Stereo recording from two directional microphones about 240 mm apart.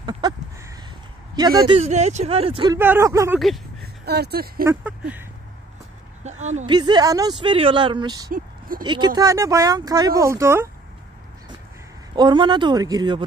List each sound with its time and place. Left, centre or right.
0.0 s a sound: centre
1.3 s speech: centre
2.8 s speech: centre
3.3 s speech: centre
3.8 s speech: right
6.5 s speech: centre
8.3 s speech: right
8.8 s speech: centre
12.2 s speech: centre